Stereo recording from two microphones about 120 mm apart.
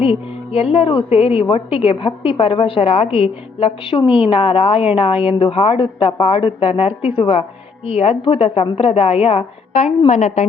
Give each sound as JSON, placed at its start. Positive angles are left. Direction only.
{"t": 0.0, "sound": "a woman's voice", "side_deg": 50}
{"t": 10.1, "sound": "a woman's voice", "side_deg": 75}